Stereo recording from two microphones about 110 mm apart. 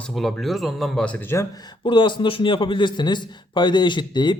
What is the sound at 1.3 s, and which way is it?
Speech, 25° left (ahead or behind).